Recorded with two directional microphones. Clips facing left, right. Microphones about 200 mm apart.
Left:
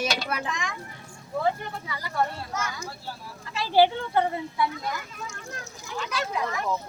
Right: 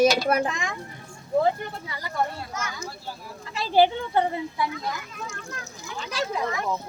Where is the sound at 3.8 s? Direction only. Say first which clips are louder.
Right 1 dB; 20° right (ahead or behind).